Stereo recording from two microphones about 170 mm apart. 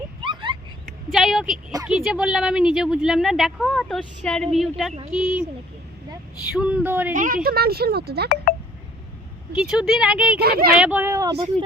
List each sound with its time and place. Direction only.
0.2 s a sound: 30° right (ahead or behind)
0.9 s a woman's voice: centre (ahead or behind)
6.5 s speech: 5° right (ahead or behind)
7.1 s a woman's voice: 50° right (ahead or behind); by 8.3 s 70° right (ahead or behind)
9.6 s a woman's voice: 5° right (ahead or behind)
10.4 s a woman's voice: 65° right (ahead or behind)
10.8 s speech: 10° right (ahead or behind)